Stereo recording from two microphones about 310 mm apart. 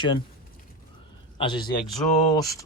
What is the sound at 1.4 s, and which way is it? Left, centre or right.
Speech, centre.